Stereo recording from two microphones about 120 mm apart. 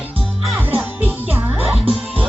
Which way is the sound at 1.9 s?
50° right (ahead or behind).